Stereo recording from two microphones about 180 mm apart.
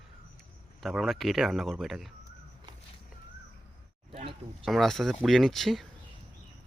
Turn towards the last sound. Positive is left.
turn(degrees=0)  # may be behind; listen again after turning